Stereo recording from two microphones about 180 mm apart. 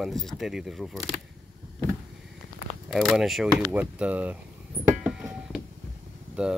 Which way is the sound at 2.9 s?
Centre (ahead or behind).